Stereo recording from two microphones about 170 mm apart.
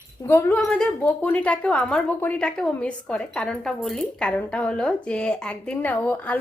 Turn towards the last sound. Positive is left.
turn(degrees=10)  # may be behind; listen again after turning